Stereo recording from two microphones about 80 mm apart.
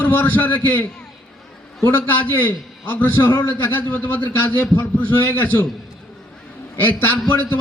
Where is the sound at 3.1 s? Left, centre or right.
Left.